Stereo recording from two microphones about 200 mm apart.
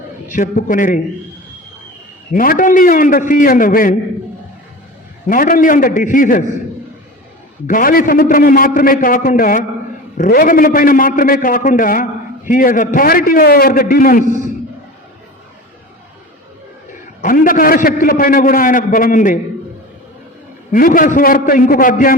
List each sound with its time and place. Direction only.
0.3 s a man's voice: 40° left (ahead or behind)
2.3 s a man's voice: 45° left (ahead or behind)
5.3 s a man's voice: 45° left (ahead or behind)
7.7 s a man's voice: 45° left (ahead or behind)
17.2 s a man's voice: 45° left (ahead or behind)
20.7 s a man's voice: 45° left (ahead or behind)